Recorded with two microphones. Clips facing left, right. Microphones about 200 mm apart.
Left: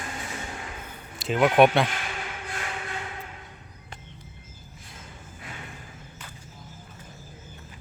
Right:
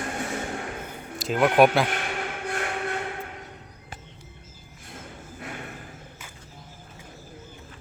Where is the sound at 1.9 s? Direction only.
60° right (ahead or behind).